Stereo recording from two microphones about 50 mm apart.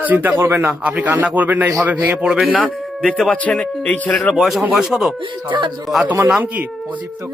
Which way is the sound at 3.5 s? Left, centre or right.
Centre.